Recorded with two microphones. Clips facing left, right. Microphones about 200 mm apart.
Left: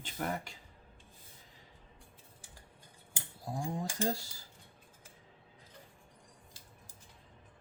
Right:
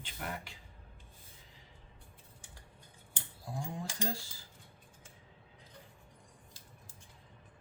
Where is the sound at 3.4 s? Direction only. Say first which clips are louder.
Left 4 dB; 40° left (ahead or behind).